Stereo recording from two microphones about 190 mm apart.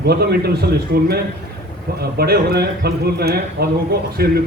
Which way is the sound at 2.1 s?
55° right (ahead or behind).